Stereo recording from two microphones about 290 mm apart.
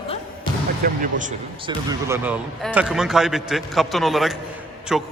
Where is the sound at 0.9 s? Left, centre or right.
Right.